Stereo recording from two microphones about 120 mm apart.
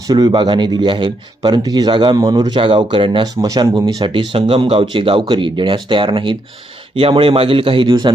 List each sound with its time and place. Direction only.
0.1 s speech: 35° right (ahead or behind)
2.6 s speech: 50° right (ahead or behind)